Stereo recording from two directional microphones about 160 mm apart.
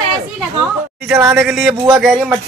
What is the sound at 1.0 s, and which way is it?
Speech, 5° right (ahead or behind).